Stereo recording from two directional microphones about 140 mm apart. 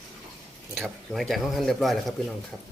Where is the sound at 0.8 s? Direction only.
Centre (ahead or behind).